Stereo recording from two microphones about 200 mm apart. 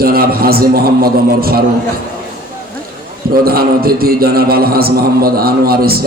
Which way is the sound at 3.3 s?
50° right (ahead or behind).